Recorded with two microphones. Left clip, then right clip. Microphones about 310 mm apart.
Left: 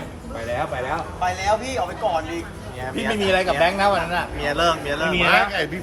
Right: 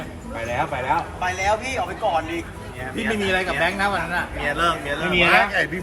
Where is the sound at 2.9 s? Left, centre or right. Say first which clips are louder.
Left 2 dB; left.